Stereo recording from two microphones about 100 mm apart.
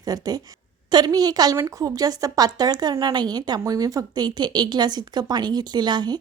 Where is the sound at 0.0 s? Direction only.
40° right (ahead or behind).